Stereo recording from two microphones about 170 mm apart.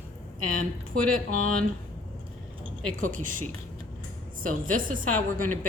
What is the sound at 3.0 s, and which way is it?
Speech, 50° right (ahead or behind).